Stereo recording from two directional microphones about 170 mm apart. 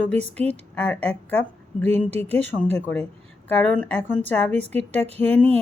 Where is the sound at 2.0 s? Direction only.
35° right (ahead or behind).